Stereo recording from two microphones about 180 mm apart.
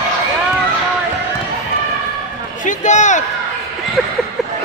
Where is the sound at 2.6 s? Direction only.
40° left (ahead or behind).